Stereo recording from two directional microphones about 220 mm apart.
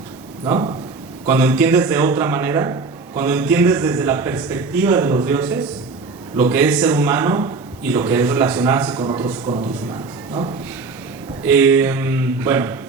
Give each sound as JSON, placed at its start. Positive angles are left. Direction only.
{"t": 0.4, "sound": "a man's voice", "side_deg": -20}
{"t": 1.3, "sound": "a man's voice", "side_deg": -10}
{"t": 9.0, "sound": "a man's voice", "side_deg": -20}
{"t": 11.4, "sound": "a man's voice", "side_deg": -10}